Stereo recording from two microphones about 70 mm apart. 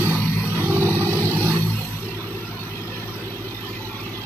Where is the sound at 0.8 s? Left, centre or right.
Right.